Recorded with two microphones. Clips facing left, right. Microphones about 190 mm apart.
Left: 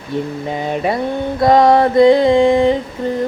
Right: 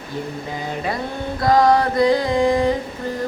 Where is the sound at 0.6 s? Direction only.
20° left (ahead or behind).